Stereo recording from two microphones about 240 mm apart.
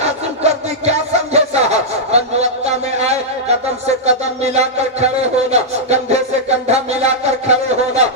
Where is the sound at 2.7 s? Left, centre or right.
Right.